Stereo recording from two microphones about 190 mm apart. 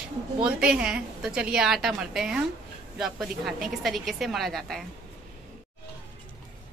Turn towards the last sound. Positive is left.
turn(degrees=0)  # may be behind; listen again after turning